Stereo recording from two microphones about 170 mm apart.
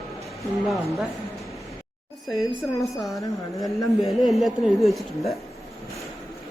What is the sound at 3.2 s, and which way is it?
Speech, 20° left (ahead or behind).